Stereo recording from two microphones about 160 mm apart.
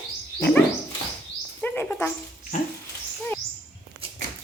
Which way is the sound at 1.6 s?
10° left (ahead or behind).